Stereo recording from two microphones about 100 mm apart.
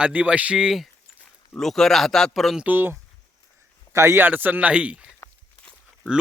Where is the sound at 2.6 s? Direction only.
20° right (ahead or behind).